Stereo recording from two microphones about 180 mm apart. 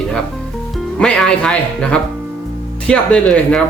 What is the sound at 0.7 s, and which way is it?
Speech, 5° left (ahead or behind).